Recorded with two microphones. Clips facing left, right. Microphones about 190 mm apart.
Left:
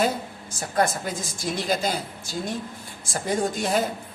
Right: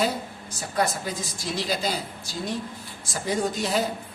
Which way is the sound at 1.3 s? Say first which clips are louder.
Left 4 dB; 50° left (ahead or behind).